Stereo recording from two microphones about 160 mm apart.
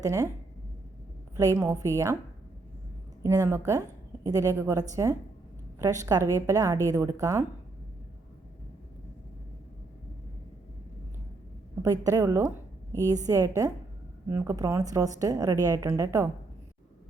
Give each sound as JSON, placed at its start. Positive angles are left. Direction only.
{"t": 0.0, "sound": "a woman's voice", "side_deg": -20}
{"t": 1.4, "sound": "a woman's voice", "side_deg": -15}
{"t": 3.2, "sound": "a woman's voice", "side_deg": -15}
{"t": 11.8, "sound": "a woman's voice", "side_deg": -20}